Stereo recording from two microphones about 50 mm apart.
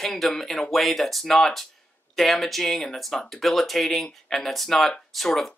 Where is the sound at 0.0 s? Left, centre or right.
Centre.